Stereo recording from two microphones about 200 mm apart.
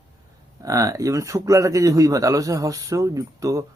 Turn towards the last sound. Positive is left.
turn(degrees=-15)  # may be behind; listen again after turning